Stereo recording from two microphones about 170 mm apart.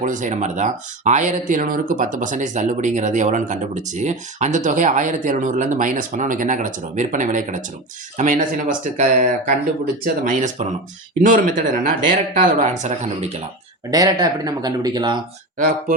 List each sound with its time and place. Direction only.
0.0 s speech: 50° right (ahead or behind)
13.9 s speech: 20° right (ahead or behind)
15.5 s speech: 55° right (ahead or behind)